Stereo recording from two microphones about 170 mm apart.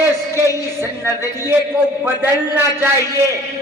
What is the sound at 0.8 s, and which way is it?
A man's voice, 15° right (ahead or behind).